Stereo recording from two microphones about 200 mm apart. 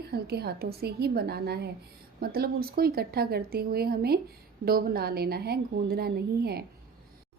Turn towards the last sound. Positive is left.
turn(degrees=-50)  # may be behind; listen again after turning